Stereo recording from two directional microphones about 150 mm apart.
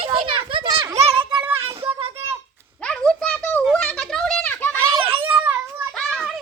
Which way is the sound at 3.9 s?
Centre (ahead or behind).